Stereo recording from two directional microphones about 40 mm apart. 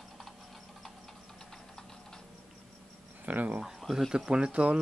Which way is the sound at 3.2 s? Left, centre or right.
Right.